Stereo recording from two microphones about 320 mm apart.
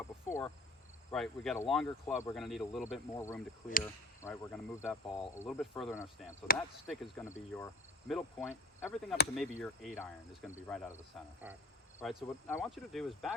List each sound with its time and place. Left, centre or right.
0.3 s speech: centre
6.5 s speech: left
6.8 s speech: centre
7.5 s cricket: centre
9.3 s speech: centre
11.9 s speech: centre